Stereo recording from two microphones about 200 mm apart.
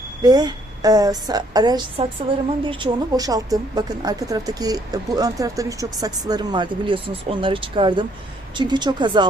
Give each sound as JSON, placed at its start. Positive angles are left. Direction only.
{"t": 0.2, "sound": "speech", "side_deg": -20}